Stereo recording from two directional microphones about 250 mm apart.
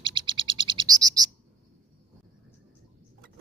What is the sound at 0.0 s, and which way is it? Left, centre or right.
Bird, centre.